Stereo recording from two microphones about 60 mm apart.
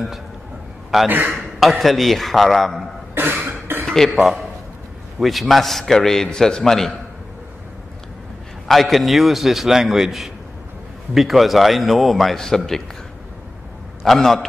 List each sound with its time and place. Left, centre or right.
1.0 s a man's voice: right
1.3 s a man's voice: centre
3.4 s throat clearing: right
3.8 s a man's voice: centre
8.6 s a man's voice: centre
14.0 s a man's voice: centre